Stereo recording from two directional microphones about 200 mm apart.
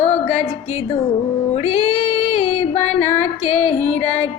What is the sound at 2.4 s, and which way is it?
Female singing, 35° left (ahead or behind).